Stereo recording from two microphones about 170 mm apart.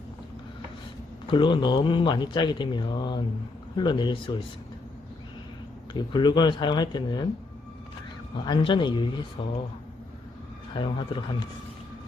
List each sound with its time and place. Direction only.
1.3 s speech: 30° left (ahead or behind)
5.9 s speech: 25° left (ahead or behind)
8.4 s speech: 30° left (ahead or behind)
10.8 s speech: 30° left (ahead or behind)